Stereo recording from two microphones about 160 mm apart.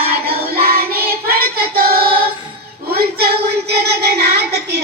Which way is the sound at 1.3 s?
70° right (ahead or behind).